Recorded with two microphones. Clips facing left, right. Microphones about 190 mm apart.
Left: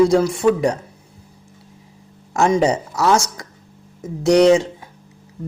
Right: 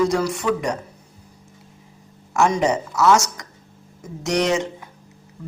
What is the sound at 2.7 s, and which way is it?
Speech, 35° left (ahead or behind).